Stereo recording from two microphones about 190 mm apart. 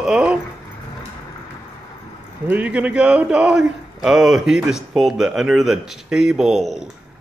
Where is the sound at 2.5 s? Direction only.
5° right (ahead or behind).